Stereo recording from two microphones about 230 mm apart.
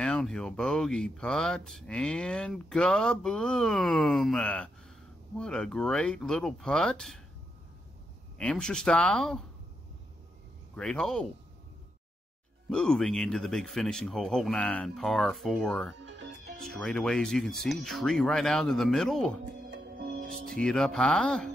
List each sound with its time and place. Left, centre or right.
0.0 s speech: centre
8.4 s speech: centre
10.7 s speech: centre
12.6 s speech: centre
20.0 s music: right
20.5 s speech: centre